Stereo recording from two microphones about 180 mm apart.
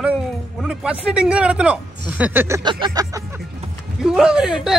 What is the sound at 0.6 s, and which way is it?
Speech, 5° right (ahead or behind).